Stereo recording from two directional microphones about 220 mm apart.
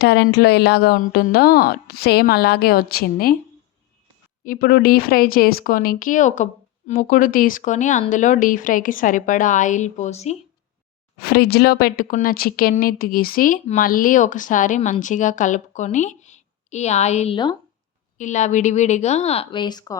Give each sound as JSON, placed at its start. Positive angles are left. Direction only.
{"t": 0.0, "sound": "a woman's voice", "side_deg": 50}
{"t": 4.4, "sound": "speech", "side_deg": 40}
{"t": 11.2, "sound": "speech", "side_deg": 45}